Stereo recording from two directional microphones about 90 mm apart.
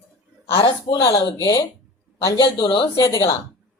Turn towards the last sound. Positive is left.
turn(degrees=45)  # may be behind; listen again after turning